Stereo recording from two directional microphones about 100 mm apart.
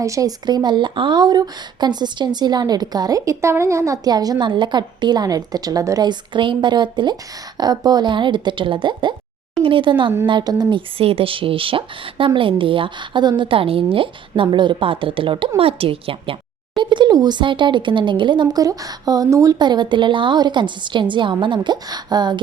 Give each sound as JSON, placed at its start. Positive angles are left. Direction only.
{"t": 0.0, "sound": "a woman's voice", "side_deg": -35}
{"t": 10.8, "sound": "a woman's voice", "side_deg": -70}
{"t": 19.5, "sound": "a woman's voice", "side_deg": -50}